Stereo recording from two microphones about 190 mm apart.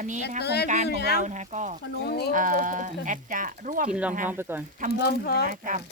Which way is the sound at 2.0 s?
60° left (ahead or behind).